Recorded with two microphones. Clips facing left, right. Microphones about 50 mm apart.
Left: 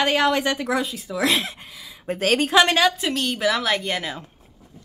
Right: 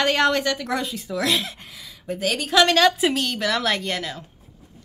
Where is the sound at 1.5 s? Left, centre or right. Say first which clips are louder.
Left 1 dB; centre.